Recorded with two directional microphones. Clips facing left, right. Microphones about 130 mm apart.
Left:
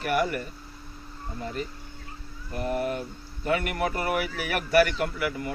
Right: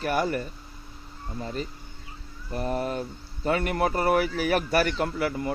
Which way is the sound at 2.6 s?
35° right (ahead or behind).